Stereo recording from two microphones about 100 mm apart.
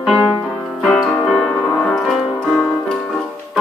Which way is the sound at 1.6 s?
15° left (ahead or behind).